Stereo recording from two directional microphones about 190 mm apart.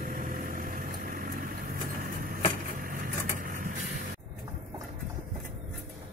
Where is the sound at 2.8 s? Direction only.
45° right (ahead or behind).